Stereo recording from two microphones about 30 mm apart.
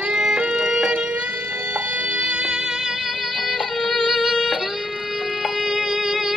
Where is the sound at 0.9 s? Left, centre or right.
Right.